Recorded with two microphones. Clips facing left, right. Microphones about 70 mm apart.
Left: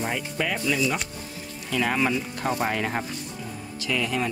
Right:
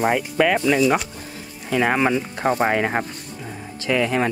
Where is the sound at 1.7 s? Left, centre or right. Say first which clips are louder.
Right 5 dB; right.